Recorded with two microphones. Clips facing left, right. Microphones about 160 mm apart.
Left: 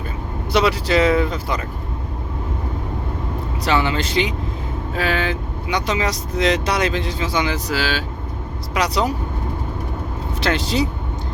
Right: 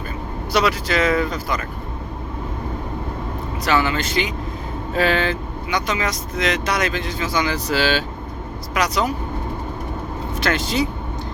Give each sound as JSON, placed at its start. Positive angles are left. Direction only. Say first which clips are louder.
{"t": 0.5, "sound": "speech", "louder": "left 2 dB", "side_deg": 30}
{"t": 3.6, "sound": "speech", "louder": "even", "side_deg": 25}
{"t": 4.9, "sound": "speech", "louder": "right 3 dB", "side_deg": 5}
{"t": 5.7, "sound": "speech", "louder": "left 2 dB", "side_deg": 30}
{"t": 7.7, "sound": "speech", "louder": "right 3 dB", "side_deg": 5}
{"t": 8.7, "sound": "speech", "louder": "left 1 dB", "side_deg": 30}
{"t": 10.4, "sound": "speech", "louder": "left 1 dB", "side_deg": 30}